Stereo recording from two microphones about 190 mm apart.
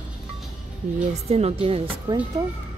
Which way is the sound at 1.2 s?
35° right (ahead or behind).